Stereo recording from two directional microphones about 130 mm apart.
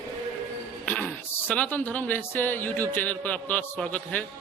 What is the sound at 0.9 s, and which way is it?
Speech, 10° left (ahead or behind).